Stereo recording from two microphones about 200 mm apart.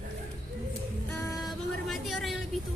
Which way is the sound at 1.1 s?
15° left (ahead or behind).